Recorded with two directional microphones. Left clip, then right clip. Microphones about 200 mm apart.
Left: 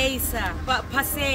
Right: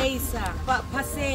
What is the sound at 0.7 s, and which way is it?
Speech, centre (ahead or behind).